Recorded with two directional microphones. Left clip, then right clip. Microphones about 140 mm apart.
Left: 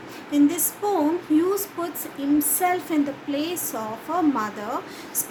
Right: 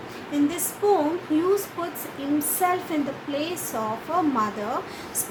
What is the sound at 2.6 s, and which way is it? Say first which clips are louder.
Speech: left 1 dB; 40° left (ahead or behind).